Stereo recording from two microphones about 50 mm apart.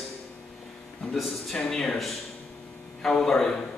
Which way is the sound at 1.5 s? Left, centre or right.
Centre.